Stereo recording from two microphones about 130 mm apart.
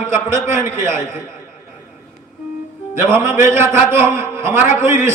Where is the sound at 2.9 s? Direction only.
20° right (ahead or behind).